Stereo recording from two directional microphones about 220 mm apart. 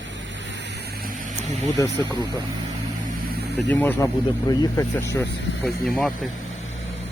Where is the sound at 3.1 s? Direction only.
50° right (ahead or behind).